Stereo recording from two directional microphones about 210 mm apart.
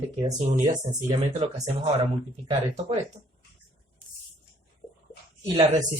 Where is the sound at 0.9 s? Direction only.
20° right (ahead or behind).